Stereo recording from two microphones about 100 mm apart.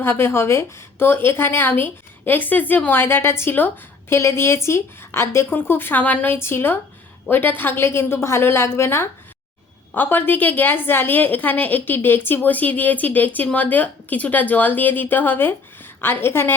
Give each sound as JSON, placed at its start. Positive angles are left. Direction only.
{"t": 0.0, "sound": "a woman's voice", "side_deg": 25}